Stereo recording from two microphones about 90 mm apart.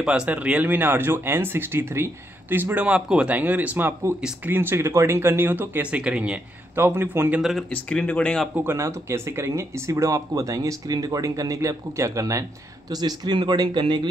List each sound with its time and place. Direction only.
0.0 s speech: 10° right (ahead or behind)
6.7 s speech: 25° right (ahead or behind)
7.7 s speech: 10° left (ahead or behind)
8.5 s speech: 30° right (ahead or behind)
12.9 s speech: 50° right (ahead or behind)